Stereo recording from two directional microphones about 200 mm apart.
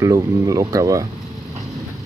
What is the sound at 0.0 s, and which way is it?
Speech, 15° right (ahead or behind).